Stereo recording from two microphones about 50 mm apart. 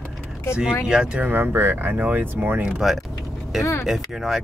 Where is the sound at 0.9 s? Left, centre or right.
Centre.